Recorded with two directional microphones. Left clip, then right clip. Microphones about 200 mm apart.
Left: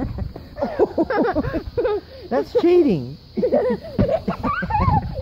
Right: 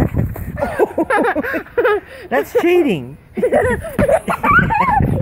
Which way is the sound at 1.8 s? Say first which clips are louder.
Right 7 dB; centre (ahead or behind).